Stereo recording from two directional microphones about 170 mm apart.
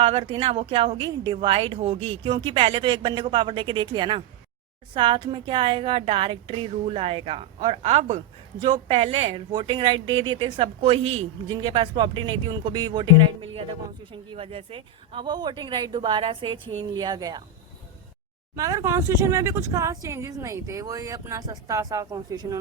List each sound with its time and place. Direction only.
0.0 s a woman's voice: 35° right (ahead or behind)
18.5 s speech: 20° right (ahead or behind)